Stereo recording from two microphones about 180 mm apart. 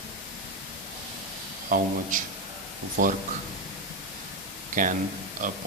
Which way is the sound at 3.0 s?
50° right (ahead or behind).